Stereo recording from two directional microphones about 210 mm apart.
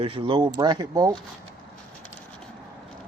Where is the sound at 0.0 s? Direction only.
25° right (ahead or behind).